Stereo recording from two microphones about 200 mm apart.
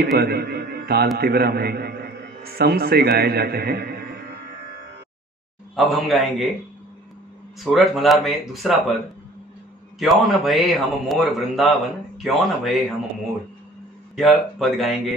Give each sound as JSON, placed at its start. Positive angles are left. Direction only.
{"t": 0.0, "sound": "a man's voice", "side_deg": -50}
{"t": 5.8, "sound": "a man's voice", "side_deg": 0}
{"t": 7.6, "sound": "a man's voice", "side_deg": 0}
{"t": 9.9, "sound": "a man's voice", "side_deg": 0}
{"t": 14.6, "sound": "a man's voice", "side_deg": 0}